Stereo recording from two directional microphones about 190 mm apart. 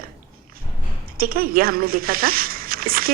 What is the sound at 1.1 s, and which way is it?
A woman's voice, 50° right (ahead or behind).